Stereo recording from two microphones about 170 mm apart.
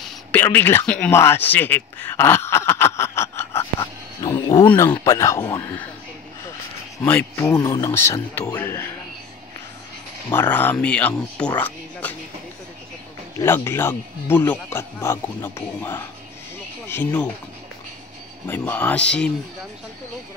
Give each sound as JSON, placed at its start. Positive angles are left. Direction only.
{"t": 0.0, "sound": "speech", "side_deg": 10}
{"t": 3.8, "sound": "wild animals", "side_deg": 25}
{"t": 4.6, "sound": "speech", "side_deg": 10}
{"t": 7.0, "sound": "speech", "side_deg": 15}
{"t": 10.3, "sound": "speech", "side_deg": 10}
{"t": 13.4, "sound": "speech", "side_deg": 15}
{"t": 18.5, "sound": "speech", "side_deg": 10}